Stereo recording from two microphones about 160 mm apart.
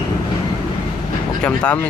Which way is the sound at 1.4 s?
10° left (ahead or behind).